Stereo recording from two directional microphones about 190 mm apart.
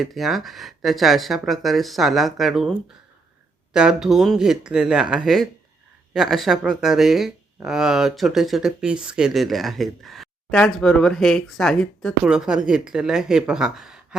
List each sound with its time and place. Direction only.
0.0 s speech: centre (ahead or behind)